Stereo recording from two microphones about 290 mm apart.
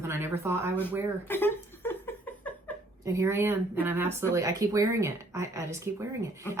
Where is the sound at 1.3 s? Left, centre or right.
Centre.